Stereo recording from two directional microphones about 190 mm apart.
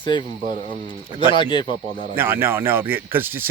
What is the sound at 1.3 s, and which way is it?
Speech, 25° left (ahead or behind).